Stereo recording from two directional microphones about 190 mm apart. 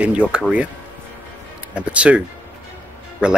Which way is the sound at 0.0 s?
5° right (ahead or behind).